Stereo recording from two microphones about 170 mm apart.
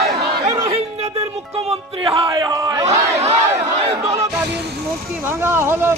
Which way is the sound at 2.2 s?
20° right (ahead or behind).